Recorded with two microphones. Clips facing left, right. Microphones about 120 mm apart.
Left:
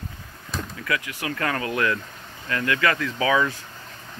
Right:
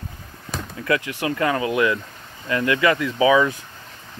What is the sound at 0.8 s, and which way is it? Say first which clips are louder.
Speech: right 7 dB; 30° right (ahead or behind).